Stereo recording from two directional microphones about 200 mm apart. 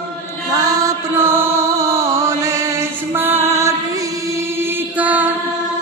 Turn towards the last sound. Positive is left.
turn(degrees=-10)  # may be behind; listen again after turning